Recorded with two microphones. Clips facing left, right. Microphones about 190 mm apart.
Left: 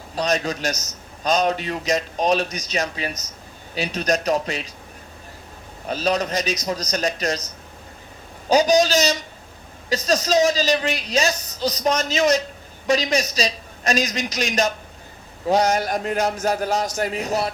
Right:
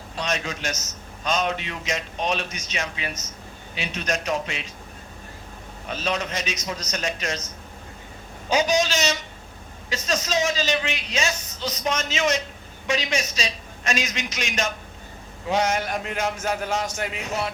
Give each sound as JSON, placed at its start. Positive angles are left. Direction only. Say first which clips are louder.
{"t": 0.2, "sound": "a man's voice", "louder": "left 6 dB", "side_deg": 35}
{"t": 5.9, "sound": "a man's voice", "louder": "left 6 dB", "side_deg": 40}
{"t": 8.4, "sound": "a man's voice", "louder": "left 5 dB", "side_deg": 35}